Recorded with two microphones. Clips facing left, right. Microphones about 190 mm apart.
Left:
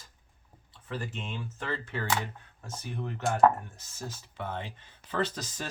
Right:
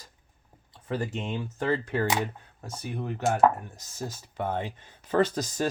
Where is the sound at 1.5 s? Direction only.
40° right (ahead or behind).